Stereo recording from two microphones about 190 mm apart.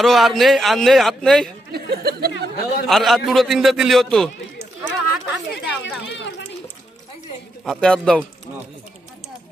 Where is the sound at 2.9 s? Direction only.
Centre (ahead or behind).